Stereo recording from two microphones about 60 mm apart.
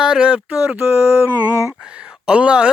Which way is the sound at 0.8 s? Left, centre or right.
Right.